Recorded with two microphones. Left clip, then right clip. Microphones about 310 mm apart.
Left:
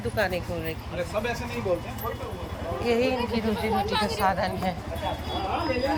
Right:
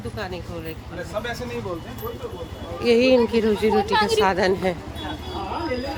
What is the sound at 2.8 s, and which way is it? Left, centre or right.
Speech, centre.